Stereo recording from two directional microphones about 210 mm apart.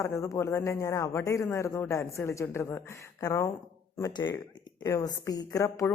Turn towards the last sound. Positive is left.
turn(degrees=15)  # may be behind; listen again after turning